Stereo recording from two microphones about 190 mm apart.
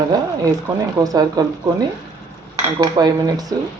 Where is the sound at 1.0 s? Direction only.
20° right (ahead or behind).